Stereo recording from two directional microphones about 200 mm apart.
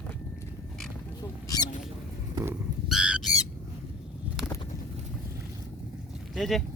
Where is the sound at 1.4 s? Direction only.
20° left (ahead or behind).